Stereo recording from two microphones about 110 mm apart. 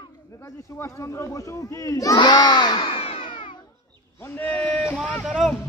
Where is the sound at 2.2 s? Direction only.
40° left (ahead or behind).